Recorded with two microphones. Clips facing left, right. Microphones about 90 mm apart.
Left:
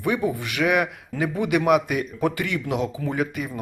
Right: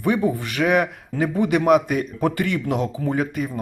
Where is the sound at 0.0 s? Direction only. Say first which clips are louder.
Right 3 dB; 35° right (ahead or behind).